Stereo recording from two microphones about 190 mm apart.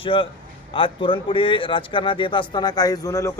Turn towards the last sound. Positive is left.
turn(degrees=15)  # may be behind; listen again after turning